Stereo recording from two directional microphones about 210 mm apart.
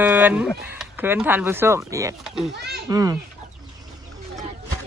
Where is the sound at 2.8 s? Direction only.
15° right (ahead or behind).